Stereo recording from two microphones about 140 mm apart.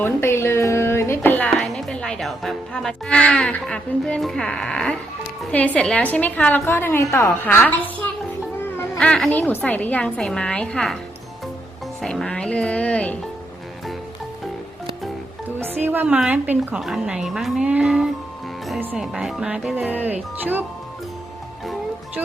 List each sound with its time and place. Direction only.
0.0 s a sound: 15° left (ahead or behind)
1.5 s a woman's voice: 5° left (ahead or behind)
7.7 s music: 10° left (ahead or behind)
9.0 s a woman's voice: 5° left (ahead or behind)
12.0 s a woman's voice: 5° left (ahead or behind)
15.4 s speech: 15° right (ahead or behind)